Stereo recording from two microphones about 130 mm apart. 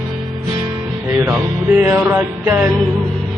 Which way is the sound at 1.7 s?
10° right (ahead or behind).